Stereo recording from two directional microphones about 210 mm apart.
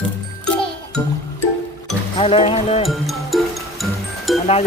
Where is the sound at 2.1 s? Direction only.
25° left (ahead or behind).